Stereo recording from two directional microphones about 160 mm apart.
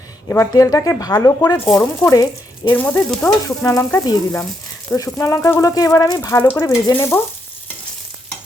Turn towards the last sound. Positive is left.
turn(degrees=15)  # may be behind; listen again after turning